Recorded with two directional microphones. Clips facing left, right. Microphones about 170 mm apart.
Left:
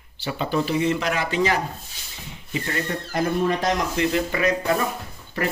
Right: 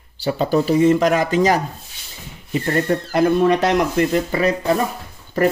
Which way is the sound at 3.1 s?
70° right (ahead or behind).